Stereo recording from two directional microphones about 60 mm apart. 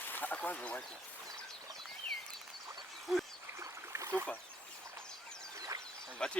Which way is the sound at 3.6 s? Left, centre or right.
Right.